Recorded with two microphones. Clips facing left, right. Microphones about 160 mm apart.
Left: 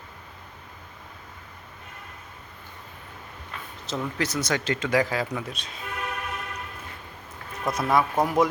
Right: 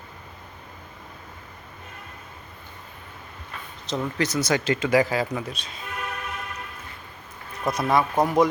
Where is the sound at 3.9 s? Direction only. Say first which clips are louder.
Right 3 dB; centre (ahead or behind).